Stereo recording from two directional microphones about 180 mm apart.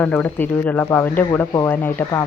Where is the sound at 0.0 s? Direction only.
10° left (ahead or behind).